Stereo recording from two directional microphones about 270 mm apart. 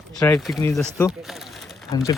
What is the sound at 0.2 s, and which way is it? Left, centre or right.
Speech, centre.